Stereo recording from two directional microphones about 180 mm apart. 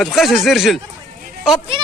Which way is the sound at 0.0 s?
Centre (ahead or behind).